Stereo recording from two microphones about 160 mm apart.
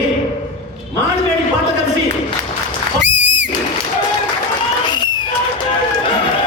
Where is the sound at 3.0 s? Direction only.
90° right.